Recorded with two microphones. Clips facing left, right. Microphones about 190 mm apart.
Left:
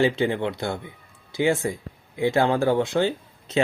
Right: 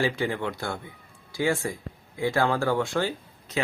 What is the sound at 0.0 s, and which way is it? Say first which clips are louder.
Speech: left 5 dB; 25° left (ahead or behind).